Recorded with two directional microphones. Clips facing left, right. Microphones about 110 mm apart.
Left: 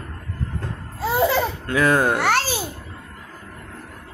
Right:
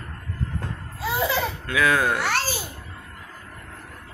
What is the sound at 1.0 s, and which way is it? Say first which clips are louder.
Laughter: left 5 dB; 45° left (ahead or behind).